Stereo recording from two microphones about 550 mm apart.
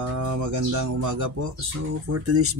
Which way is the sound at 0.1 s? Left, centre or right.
Right.